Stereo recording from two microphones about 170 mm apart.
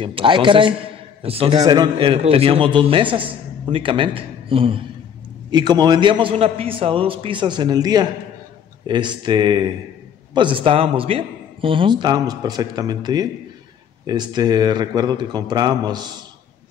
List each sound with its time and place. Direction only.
0.0 s a man's voice: 30° right (ahead or behind)